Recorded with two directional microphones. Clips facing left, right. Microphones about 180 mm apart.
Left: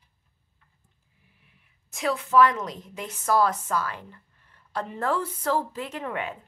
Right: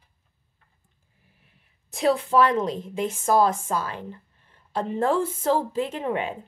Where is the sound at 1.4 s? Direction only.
35° right (ahead or behind).